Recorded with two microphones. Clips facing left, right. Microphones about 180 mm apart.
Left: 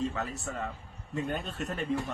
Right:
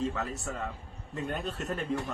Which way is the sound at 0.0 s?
Centre (ahead or behind).